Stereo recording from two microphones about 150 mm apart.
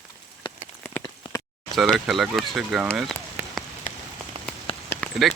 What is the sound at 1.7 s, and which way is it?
Speech, centre (ahead or behind).